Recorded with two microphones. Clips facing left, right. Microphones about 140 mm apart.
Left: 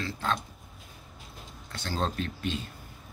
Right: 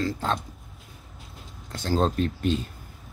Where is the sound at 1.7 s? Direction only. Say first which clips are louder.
Right 7 dB; 40° right (ahead or behind).